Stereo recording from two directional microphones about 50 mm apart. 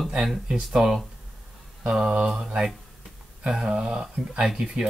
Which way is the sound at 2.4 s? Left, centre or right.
Centre.